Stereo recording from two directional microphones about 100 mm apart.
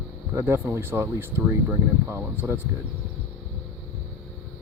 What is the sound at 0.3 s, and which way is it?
Speech, 20° right (ahead or behind).